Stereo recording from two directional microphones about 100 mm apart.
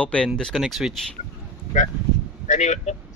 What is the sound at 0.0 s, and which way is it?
Speech, 10° left (ahead or behind).